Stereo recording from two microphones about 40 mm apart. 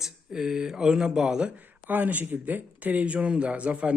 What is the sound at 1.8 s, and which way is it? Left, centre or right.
Speech, right.